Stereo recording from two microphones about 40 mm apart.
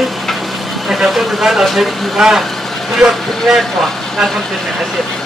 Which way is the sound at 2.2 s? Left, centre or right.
Centre.